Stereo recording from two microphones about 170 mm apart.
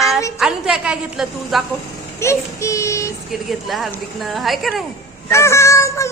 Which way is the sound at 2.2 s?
15° left (ahead or behind).